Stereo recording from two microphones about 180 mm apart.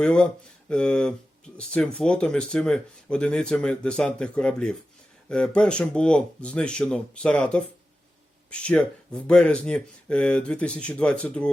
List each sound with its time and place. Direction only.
0.0 s speech: 5° left (ahead or behind)